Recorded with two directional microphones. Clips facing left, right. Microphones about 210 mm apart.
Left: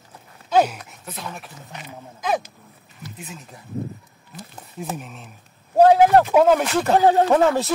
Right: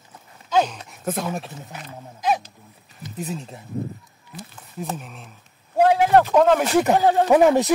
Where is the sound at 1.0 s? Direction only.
50° right (ahead or behind).